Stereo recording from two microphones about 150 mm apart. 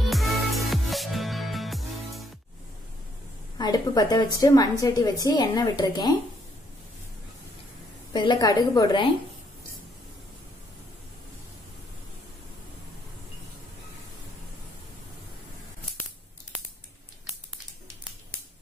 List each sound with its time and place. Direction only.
0.1 s music: centre (ahead or behind)
3.5 s a woman's voice: 25° left (ahead or behind)
8.1 s a woman's voice: 30° left (ahead or behind)